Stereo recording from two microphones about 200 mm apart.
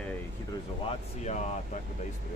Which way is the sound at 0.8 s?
35° left (ahead or behind).